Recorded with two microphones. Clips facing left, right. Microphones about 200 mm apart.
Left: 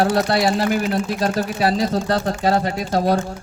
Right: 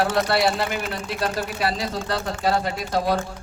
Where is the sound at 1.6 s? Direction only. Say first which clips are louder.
Left 8 dB; 40° left (ahead or behind).